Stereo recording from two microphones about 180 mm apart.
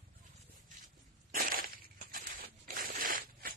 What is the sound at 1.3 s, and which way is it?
Crushing, 50° right (ahead or behind).